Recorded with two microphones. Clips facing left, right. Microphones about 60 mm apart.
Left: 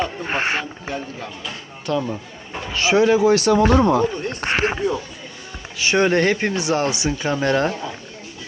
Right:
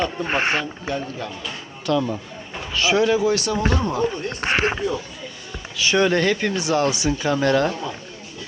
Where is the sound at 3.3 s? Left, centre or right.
Left.